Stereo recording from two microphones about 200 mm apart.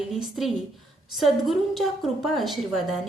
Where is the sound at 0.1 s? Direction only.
Centre (ahead or behind).